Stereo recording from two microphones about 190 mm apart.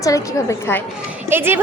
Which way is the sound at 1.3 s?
10° right (ahead or behind).